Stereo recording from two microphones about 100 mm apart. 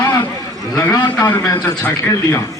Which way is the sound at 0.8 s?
25° left (ahead or behind).